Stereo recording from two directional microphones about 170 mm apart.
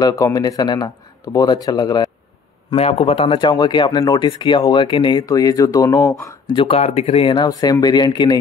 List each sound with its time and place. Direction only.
0.0 s speech: 20° left (ahead or behind)
2.7 s speech: 35° left (ahead or behind); by 6.3 s 20° left (ahead or behind)
6.5 s speech: 35° left (ahead or behind)